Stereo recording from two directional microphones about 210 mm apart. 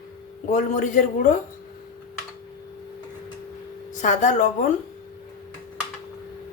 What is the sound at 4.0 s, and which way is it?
Speech, 35° left (ahead or behind).